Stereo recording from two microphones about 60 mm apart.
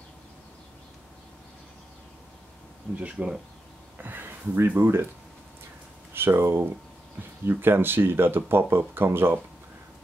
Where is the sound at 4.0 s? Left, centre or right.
Right.